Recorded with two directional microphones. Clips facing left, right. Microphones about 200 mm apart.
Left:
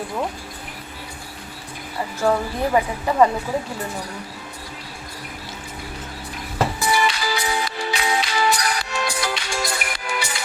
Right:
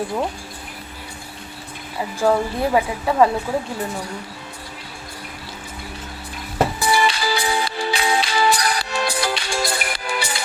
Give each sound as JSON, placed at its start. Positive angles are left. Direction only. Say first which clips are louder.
{"t": 2.2, "sound": "a woman's voice", "louder": "right 2 dB", "side_deg": -5}
{"t": 6.7, "sound": "music", "louder": "right 2 dB", "side_deg": -30}